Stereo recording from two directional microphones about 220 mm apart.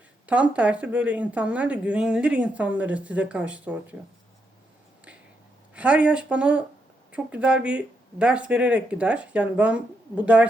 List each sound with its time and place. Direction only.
0.3 s speech: 5° right (ahead or behind)
5.7 s speech: 5° right (ahead or behind)